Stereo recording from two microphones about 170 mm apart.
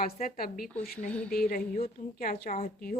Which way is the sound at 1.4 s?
60° left (ahead or behind).